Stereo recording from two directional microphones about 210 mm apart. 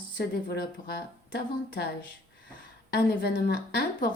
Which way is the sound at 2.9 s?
50° left (ahead or behind).